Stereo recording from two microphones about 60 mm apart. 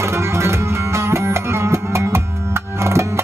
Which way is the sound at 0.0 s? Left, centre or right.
Right.